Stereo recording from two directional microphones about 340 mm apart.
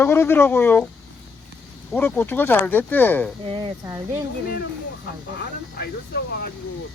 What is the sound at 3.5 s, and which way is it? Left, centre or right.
Speech, centre.